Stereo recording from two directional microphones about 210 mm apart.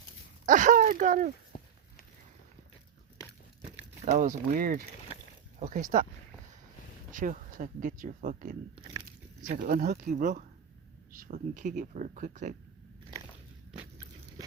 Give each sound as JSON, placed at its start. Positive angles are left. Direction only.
{"t": 0.4, "sound": "speech", "side_deg": -35}
{"t": 4.0, "sound": "speech", "side_deg": -35}
{"t": 7.1, "sound": "speech", "side_deg": -40}
{"t": 8.8, "sound": "a sound", "side_deg": -20}
{"t": 9.5, "sound": "speech", "side_deg": -40}